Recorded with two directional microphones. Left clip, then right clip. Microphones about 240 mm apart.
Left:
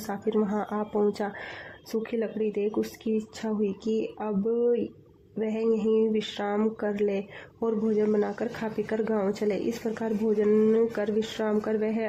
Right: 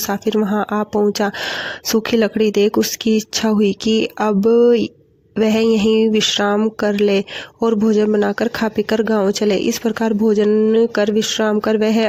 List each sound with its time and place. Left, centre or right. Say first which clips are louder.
0.1 s speech: right 8 dB; right